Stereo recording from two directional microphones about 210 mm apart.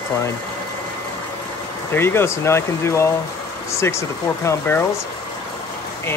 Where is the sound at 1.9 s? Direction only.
10° left (ahead or behind).